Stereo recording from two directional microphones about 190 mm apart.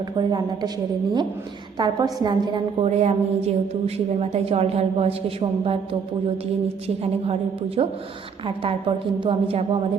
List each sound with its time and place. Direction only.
0.2 s a woman's voice: 20° right (ahead or behind)
1.8 s a woman's voice: 20° right (ahead or behind)
2.8 s a woman's voice: 35° right (ahead or behind)
9.2 s a woman's voice: 30° right (ahead or behind)